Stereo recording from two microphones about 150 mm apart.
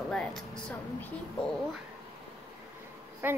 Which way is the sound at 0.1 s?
5° left (ahead or behind).